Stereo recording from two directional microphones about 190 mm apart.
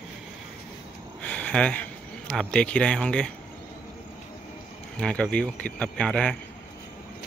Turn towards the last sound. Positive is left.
turn(degrees=5)  # may be behind; listen again after turning